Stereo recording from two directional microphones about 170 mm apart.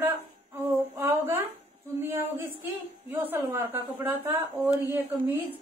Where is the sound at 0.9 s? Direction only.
15° right (ahead or behind).